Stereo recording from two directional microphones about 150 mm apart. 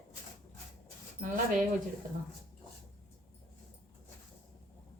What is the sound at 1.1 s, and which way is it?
Speech, 65° right (ahead or behind).